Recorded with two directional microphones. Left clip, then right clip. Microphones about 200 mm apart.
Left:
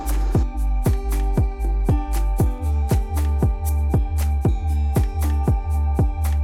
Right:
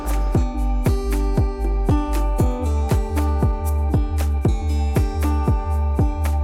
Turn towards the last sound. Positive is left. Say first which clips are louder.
# right 3 dB
turn(degrees=0)  # may be behind; listen again after turning